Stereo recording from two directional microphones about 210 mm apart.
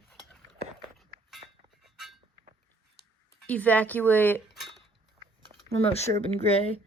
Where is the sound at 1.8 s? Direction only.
Centre (ahead or behind).